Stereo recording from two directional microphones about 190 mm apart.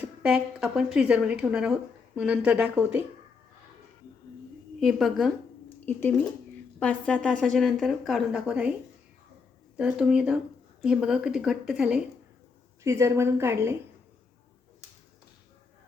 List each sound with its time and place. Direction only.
0.0 s a woman's voice: 5° right (ahead or behind)
4.8 s a woman's voice: centre (ahead or behind)
5.6 s a sound: 10° left (ahead or behind)
6.7 s a woman's voice: 5° left (ahead or behind)
9.7 s a woman's voice: 5° right (ahead or behind)
12.8 s a woman's voice: 15° right (ahead or behind)